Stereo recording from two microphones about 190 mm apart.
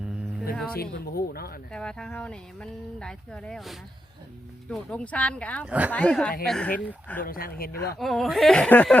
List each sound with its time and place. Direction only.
0.5 s speech: 5° left (ahead or behind)
0.8 s speech: 55° left (ahead or behind)
1.7 s speech: 5° left (ahead or behind)
5.6 s a woman's voice: 5° right (ahead or behind)
5.9 s speech: 5° left (ahead or behind)
7.2 s speech: 50° left (ahead or behind)
7.9 s speech: centre (ahead or behind)